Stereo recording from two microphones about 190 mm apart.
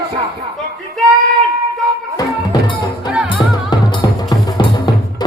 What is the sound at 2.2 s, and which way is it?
Music, 20° left (ahead or behind).